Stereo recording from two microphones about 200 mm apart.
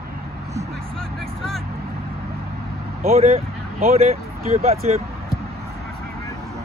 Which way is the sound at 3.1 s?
30° right (ahead or behind).